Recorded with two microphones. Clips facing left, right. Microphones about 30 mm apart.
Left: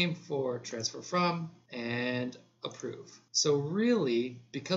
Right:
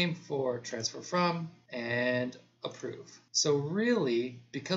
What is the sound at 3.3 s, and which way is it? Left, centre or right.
Speech, centre.